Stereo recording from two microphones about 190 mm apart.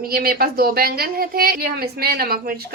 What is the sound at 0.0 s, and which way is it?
A woman's voice, 50° right (ahead or behind).